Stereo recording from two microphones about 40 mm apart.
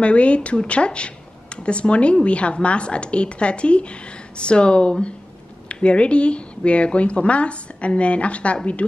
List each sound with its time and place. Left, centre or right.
0.0 s a woman's voice: left